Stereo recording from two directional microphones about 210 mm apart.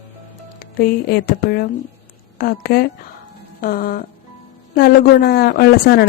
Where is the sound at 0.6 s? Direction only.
45° left (ahead or behind).